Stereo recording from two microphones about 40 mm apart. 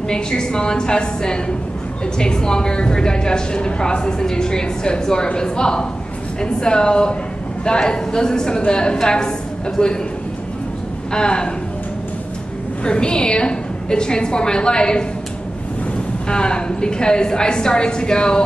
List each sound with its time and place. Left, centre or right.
0.1 s a woman's voice: centre
11.1 s a woman's voice: left
12.8 s a woman's voice: left
16.3 s a woman's voice: left